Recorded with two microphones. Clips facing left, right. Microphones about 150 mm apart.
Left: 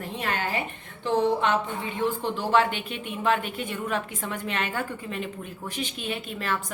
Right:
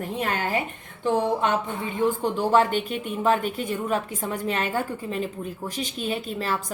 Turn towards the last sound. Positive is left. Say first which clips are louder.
# right 3 dB
turn(degrees=-35)  # may be behind; listen again after turning